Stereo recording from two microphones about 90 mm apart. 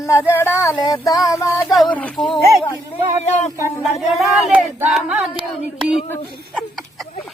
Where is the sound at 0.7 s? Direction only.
45° left (ahead or behind).